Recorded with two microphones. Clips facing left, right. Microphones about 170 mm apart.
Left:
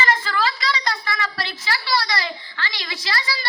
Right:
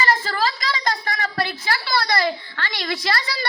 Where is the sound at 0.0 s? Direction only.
40° right (ahead or behind).